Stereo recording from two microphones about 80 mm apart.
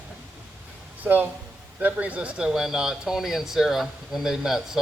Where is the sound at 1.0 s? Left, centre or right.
Right.